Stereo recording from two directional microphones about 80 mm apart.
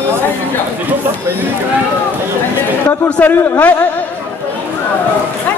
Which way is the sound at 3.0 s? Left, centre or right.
Centre.